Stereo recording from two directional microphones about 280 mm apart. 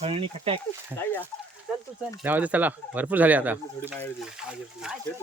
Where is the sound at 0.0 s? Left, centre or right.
Right.